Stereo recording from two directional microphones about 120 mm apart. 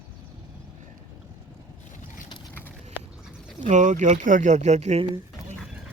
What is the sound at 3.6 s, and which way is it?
Speech, 90° right.